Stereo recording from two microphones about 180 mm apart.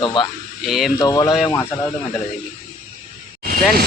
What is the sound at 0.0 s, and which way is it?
Speech, 25° left (ahead or behind).